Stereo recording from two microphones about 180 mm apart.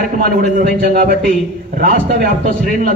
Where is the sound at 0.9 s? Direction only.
50° right (ahead or behind).